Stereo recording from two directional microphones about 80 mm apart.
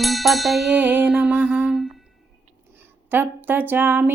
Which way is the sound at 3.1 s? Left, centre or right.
Right.